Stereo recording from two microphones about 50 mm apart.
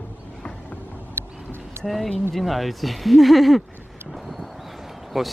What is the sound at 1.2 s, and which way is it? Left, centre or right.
Vehicle, right.